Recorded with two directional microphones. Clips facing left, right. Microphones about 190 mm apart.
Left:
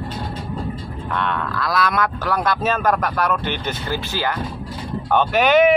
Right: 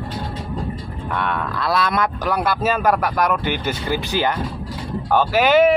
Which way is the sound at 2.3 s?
5° right (ahead or behind).